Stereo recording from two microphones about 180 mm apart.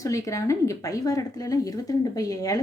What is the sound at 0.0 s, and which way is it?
Speech, 15° left (ahead or behind).